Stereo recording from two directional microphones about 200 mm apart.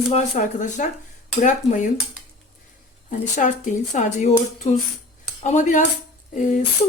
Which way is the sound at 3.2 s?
40° left (ahead or behind).